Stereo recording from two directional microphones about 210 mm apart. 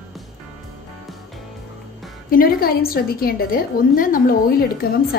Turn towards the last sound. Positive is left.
turn(degrees=45)  # may be behind; listen again after turning